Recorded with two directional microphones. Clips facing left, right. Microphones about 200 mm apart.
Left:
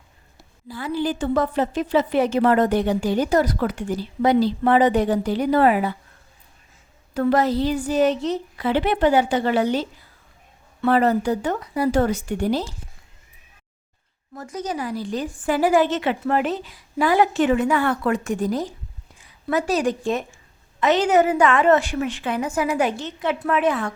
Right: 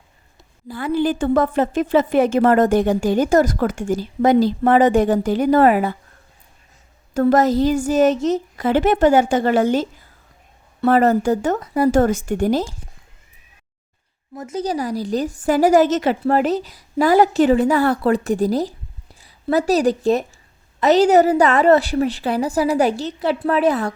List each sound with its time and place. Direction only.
0.7 s a woman's voice: 55° right (ahead or behind)
7.1 s a woman's voice: 45° right (ahead or behind)
14.3 s a woman's voice: 25° right (ahead or behind)